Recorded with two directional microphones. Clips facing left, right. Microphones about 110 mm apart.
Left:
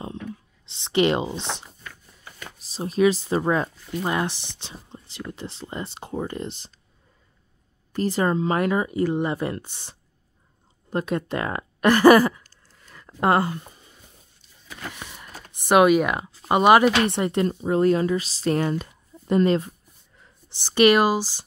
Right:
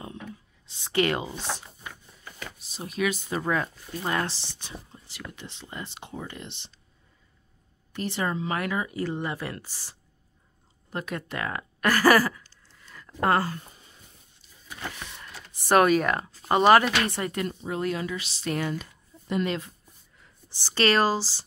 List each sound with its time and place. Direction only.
0.7 s speech: 25° left (ahead or behind)
2.7 s speech: 30° left (ahead or behind)
7.9 s speech: 35° left (ahead or behind)
9.0 s speech: 15° left (ahead or behind)
9.3 s speech: 25° left (ahead or behind)
12.9 s a sound: 25° left (ahead or behind)
14.8 s power windows: 5° left (ahead or behind)
15.5 s speech: 15° left (ahead or behind)
17.2 s speech: 25° left (ahead or behind)
17.6 s speech: 35° left (ahead or behind)
20.4 s speech: 15° left (ahead or behind)